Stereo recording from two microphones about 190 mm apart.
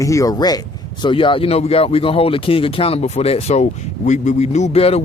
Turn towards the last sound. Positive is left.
turn(degrees=30)  # may be behind; listen again after turning